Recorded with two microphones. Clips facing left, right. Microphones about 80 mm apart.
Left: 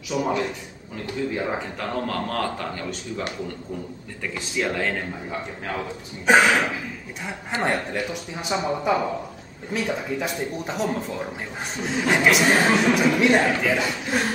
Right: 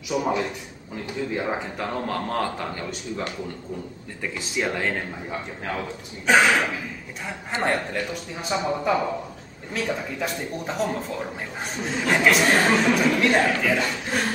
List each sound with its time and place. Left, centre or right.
0.1 s a man's voice: centre
6.2 s speech: centre